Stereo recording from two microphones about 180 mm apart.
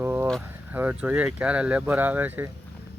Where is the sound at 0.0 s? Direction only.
10° right (ahead or behind).